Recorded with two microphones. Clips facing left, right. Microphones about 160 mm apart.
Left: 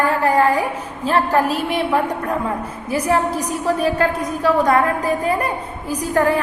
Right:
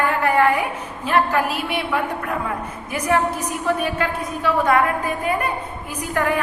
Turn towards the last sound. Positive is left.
turn(degrees=35)  # may be behind; listen again after turning